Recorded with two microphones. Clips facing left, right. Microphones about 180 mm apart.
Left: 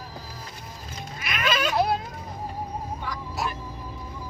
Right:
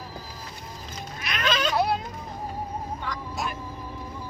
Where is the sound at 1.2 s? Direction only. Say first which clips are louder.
Even; 10° left (ahead or behind).